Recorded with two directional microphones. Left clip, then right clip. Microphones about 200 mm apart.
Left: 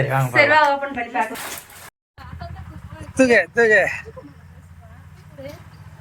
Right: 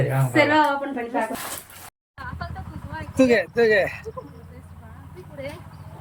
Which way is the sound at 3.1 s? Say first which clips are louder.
Left 4 dB; 5° right (ahead or behind).